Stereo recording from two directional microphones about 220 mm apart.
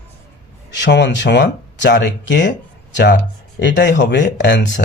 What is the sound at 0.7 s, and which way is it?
Speech, 50° left (ahead or behind).